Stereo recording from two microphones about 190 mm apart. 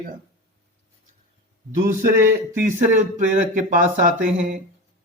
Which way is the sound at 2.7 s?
40° right (ahead or behind).